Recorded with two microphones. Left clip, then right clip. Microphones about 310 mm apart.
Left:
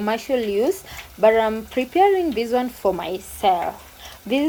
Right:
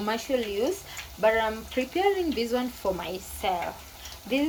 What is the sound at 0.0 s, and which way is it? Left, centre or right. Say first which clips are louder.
Speech: left 6 dB; centre.